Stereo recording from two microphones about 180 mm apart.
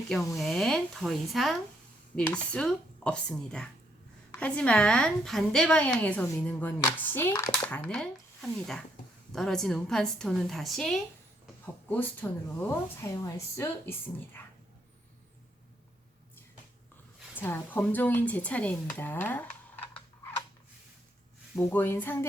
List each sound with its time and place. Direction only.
0.1 s a woman's voice: centre (ahead or behind)
7.3 s speech: 20° left (ahead or behind)
7.7 s a woman's voice: 5° left (ahead or behind)
17.3 s speech: 10° left (ahead or behind)
21.5 s speech: 10° left (ahead or behind)